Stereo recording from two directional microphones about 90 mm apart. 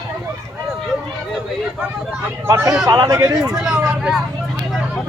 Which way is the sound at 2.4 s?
30° right (ahead or behind).